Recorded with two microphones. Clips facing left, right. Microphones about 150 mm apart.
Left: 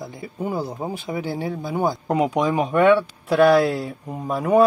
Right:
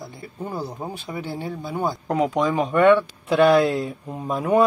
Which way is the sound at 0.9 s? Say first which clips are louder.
Left 4 dB; 10° left (ahead or behind).